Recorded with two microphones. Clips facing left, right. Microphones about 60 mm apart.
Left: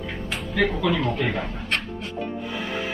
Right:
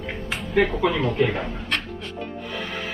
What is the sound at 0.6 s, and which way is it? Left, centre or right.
Speech, right.